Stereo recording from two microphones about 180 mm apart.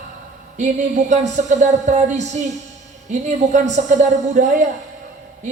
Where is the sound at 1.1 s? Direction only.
40° right (ahead or behind).